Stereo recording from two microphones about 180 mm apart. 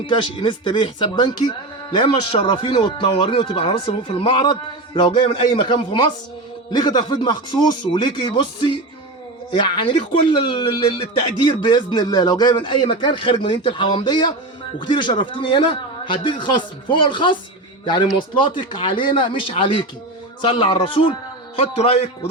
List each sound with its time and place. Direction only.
0.1 s a man's voice: 25° left (ahead or behind)